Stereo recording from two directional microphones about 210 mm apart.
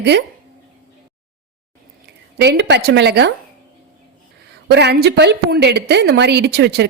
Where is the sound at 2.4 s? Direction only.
55° right (ahead or behind).